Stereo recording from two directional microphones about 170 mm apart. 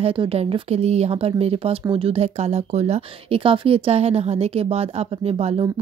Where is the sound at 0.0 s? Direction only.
35° right (ahead or behind).